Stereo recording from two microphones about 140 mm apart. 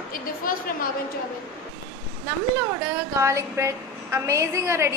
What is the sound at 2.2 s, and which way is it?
A woman's voice, 15° right (ahead or behind).